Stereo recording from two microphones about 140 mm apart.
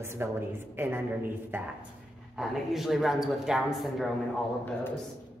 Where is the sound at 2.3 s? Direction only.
Centre (ahead or behind).